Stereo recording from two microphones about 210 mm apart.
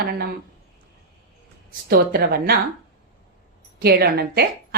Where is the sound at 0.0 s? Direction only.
50° right (ahead or behind).